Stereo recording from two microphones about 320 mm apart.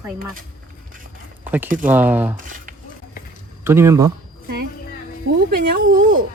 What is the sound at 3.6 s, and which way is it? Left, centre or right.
Speech, centre.